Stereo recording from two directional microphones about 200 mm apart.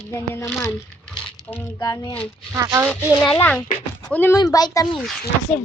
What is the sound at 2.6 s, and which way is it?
Speech, 15° right (ahead or behind).